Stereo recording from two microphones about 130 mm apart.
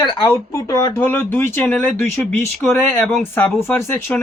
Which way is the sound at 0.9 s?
15° left (ahead or behind).